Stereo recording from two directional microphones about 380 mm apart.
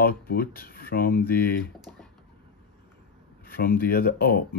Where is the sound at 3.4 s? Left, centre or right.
Left.